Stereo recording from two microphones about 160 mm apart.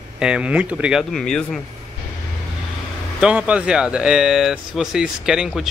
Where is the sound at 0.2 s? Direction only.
5° right (ahead or behind).